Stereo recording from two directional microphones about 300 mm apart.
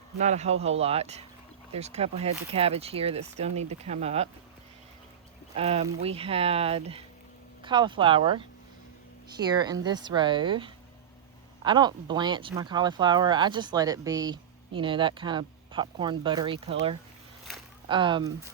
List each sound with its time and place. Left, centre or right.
0.2 s speech: right
5.5 s speech: right
17.8 s speech: centre